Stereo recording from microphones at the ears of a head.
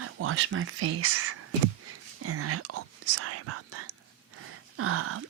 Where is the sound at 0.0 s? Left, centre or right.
Right.